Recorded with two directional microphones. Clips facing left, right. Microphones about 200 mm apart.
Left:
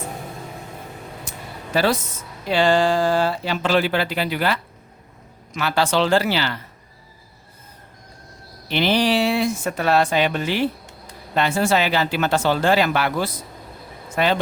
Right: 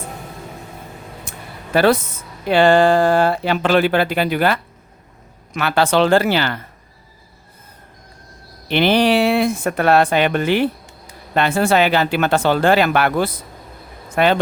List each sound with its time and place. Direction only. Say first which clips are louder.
1.2 s a sound: even; 55° right (ahead or behind)
2.5 s speech: right 5 dB; 55° right (ahead or behind)
8.6 s speech: right 4 dB; 60° right (ahead or behind)